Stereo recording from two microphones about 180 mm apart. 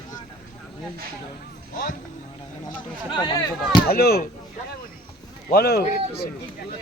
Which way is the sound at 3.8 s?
60° left (ahead or behind).